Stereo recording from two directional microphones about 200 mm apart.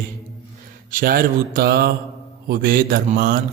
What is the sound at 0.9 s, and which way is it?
A man's voice, 45° right (ahead or behind).